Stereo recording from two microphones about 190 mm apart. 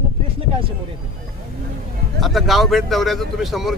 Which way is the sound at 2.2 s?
Centre (ahead or behind).